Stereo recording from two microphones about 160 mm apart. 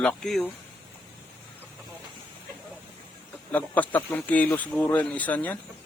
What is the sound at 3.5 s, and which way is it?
Speech, 10° left (ahead or behind).